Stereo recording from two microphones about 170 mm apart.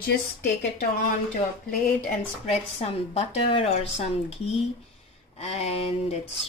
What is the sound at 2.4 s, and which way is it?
Speech, 40° left (ahead or behind).